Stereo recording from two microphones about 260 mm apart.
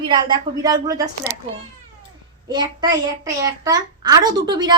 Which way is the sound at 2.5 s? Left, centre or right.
Centre.